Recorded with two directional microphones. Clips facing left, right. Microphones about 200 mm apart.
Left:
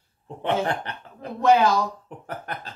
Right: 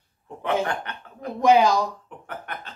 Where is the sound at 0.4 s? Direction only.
30° left (ahead or behind).